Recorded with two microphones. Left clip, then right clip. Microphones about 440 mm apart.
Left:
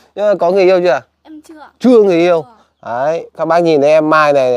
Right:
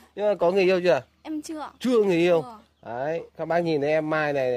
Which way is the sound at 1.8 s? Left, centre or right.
Left.